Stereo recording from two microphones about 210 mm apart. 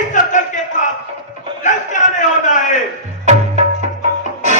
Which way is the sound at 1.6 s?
35° left (ahead or behind).